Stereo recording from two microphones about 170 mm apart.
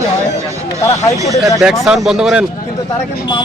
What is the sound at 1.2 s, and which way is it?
Speech, 20° right (ahead or behind).